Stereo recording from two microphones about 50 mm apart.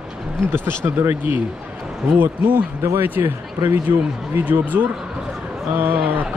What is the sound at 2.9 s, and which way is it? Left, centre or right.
Speech, right.